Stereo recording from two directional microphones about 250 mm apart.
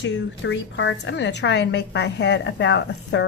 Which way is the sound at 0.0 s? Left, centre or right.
Left.